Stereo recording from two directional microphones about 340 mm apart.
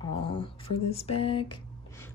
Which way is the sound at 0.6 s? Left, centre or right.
Left.